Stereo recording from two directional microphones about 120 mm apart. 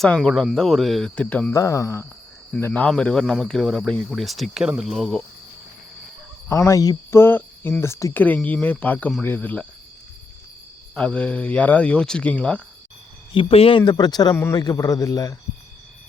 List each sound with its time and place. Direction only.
0.0 s cricket: 5° left (ahead or behind)
1.1 s speech: 10° left (ahead or behind)
1.5 s speech: 25° left (ahead or behind)
2.5 s cricket: 15° left (ahead or behind)
6.5 s speech: 25° left (ahead or behind)
8.1 s speech: 15° left (ahead or behind)
10.9 s speech: 10° left (ahead or behind)
13.3 s speech: 50° left (ahead or behind); by 14.3 s 35° left (ahead or behind)
14.3 s speech: 20° left (ahead or behind)